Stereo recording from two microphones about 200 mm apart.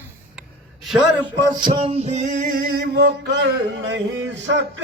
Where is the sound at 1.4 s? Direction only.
20° right (ahead or behind).